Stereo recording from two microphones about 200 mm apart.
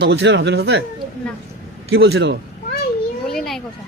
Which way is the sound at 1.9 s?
60° right (ahead or behind).